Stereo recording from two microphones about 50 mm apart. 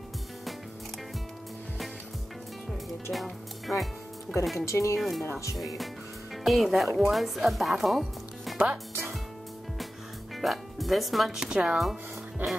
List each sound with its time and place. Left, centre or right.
2.7 s speech: centre
4.6 s speech: left
4.9 s speech: centre
10.3 s speech: centre
11.3 s speech: centre
12.4 s music: right